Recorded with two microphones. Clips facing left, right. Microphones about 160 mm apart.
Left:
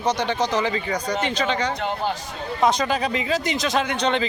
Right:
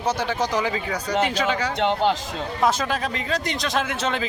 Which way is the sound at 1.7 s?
90° right.